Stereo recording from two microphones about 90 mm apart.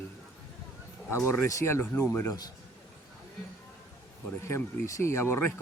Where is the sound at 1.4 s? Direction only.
35° left (ahead or behind).